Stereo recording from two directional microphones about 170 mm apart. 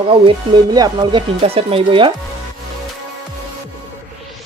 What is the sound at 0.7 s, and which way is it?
Speech, 25° right (ahead or behind).